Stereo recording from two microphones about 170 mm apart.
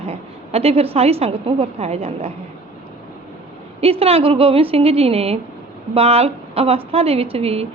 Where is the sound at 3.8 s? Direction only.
35° right (ahead or behind).